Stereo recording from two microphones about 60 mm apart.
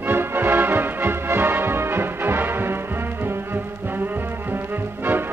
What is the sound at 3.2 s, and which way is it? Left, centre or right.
Music, right.